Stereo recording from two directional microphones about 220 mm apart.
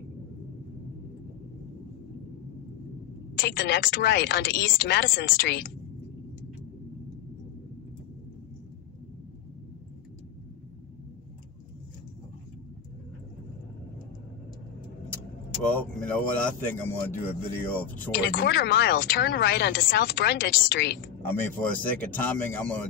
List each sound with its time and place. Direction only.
3.3 s speech: 45° left (ahead or behind)
15.7 s speech: 5° left (ahead or behind)
18.1 s speech: 45° left (ahead or behind)
21.3 s speech: 10° left (ahead or behind)